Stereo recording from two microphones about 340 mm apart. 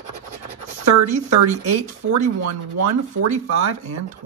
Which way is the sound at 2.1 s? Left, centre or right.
Right.